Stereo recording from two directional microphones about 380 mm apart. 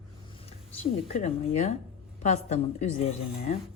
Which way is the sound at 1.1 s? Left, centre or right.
Centre.